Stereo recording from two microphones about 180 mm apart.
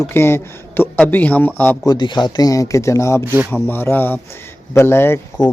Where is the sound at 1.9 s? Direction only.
25° left (ahead or behind).